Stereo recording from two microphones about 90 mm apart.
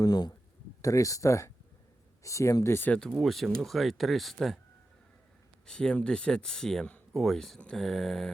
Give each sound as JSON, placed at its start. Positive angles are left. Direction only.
{"t": 0.0, "sound": "speech", "side_deg": 50}
{"t": 0.8, "sound": "speech", "side_deg": 40}
{"t": 3.1, "sound": "speech", "side_deg": 0}
{"t": 5.6, "sound": "speech", "side_deg": 10}